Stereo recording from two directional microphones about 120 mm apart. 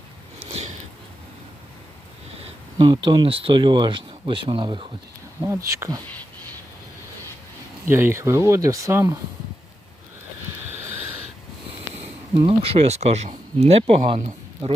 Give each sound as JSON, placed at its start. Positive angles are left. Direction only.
{"t": 0.3, "sound": "a sound", "side_deg": -60}
{"t": 2.7, "sound": "speech", "side_deg": -40}
{"t": 5.4, "sound": "speech", "side_deg": -25}
{"t": 7.9, "sound": "speech", "side_deg": -20}
{"t": 12.3, "sound": "speech", "side_deg": -45}